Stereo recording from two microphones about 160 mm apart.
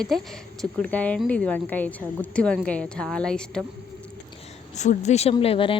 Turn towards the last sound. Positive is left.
turn(degrees=35)  # may be behind; listen again after turning